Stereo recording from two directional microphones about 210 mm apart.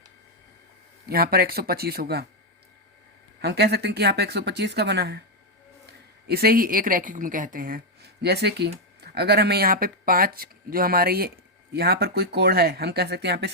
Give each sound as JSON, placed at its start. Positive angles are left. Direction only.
{"t": 1.0, "sound": "speech", "side_deg": -45}
{"t": 3.4, "sound": "speech", "side_deg": -50}